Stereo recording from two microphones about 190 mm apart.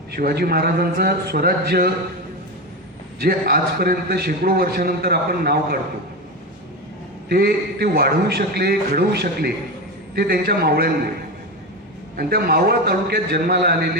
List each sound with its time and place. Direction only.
0.2 s a man's voice: 55° right (ahead or behind)
3.2 s a man's voice: 55° right (ahead or behind)
7.3 s a man's voice: 55° right (ahead or behind)
12.1 s a man's voice: 55° right (ahead or behind)